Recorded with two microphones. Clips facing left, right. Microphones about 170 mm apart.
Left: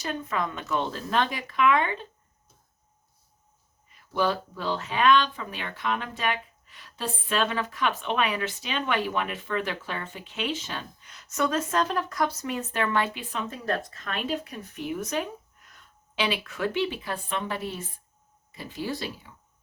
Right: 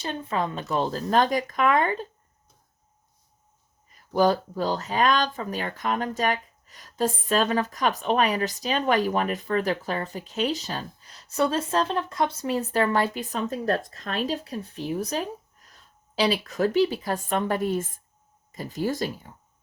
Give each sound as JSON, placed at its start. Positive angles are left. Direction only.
{"t": 0.0, "sound": "speech", "side_deg": -30}
{"t": 3.8, "sound": "speech", "side_deg": -40}